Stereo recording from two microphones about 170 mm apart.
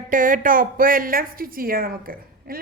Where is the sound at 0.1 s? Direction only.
50° right (ahead or behind).